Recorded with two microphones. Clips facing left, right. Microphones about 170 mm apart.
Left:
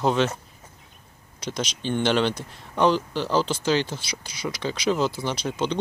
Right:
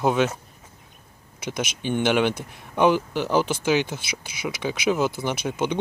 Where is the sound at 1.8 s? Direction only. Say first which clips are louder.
Right 1 dB; 10° right (ahead or behind).